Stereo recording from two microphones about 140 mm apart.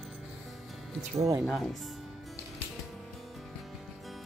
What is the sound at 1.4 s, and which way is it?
Speech, centre (ahead or behind).